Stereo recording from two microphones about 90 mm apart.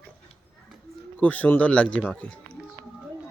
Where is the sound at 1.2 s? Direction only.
15° left (ahead or behind).